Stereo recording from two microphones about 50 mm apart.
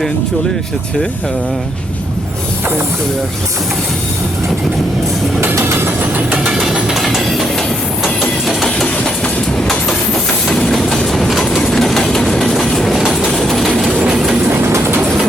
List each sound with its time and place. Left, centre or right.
5.5 s vehicle: right
6.3 s train: centre
6.8 s train: centre
8.6 s train: centre
10.7 s train: centre
14.6 s train: right